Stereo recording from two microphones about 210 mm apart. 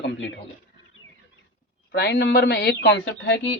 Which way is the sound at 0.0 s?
60° left (ahead or behind).